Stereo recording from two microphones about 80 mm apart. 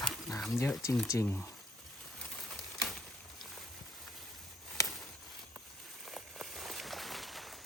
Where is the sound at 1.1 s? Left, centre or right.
Left.